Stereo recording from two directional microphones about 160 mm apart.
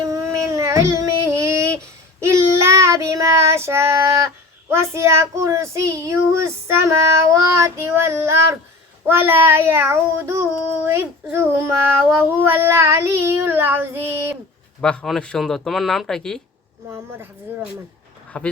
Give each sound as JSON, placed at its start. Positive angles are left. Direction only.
{"t": 0.0, "sound": "a sound", "side_deg": -20}
{"t": 2.2, "sound": "child singing", "side_deg": -15}
{"t": 14.8, "sound": "speech", "side_deg": 5}
{"t": 16.9, "sound": "child singing", "side_deg": -15}
{"t": 18.3, "sound": "speech", "side_deg": 5}